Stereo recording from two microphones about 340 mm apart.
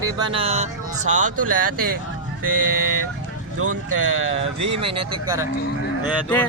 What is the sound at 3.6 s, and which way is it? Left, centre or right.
Speech, right.